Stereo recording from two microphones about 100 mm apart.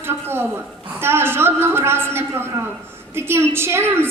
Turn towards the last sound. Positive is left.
turn(degrees=-25)  # may be behind; listen again after turning